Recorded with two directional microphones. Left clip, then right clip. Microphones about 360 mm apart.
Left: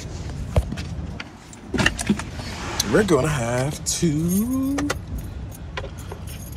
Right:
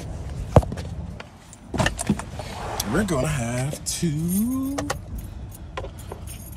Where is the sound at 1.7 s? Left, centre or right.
Right.